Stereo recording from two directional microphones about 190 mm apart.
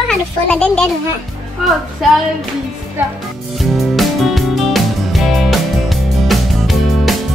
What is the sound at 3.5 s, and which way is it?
Music, centre (ahead or behind).